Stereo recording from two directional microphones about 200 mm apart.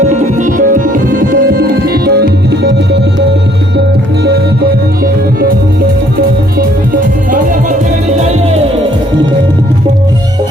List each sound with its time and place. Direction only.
0.1 s music: 40° right (ahead or behind); by 2.7 s 55° right (ahead or behind)